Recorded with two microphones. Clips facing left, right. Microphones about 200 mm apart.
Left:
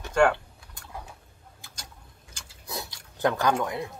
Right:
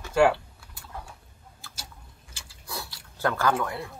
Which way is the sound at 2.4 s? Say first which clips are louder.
Left 1 dB; 20° left (ahead or behind).